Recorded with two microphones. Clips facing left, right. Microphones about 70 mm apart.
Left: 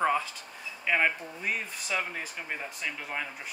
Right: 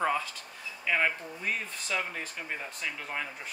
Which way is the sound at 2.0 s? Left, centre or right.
Centre.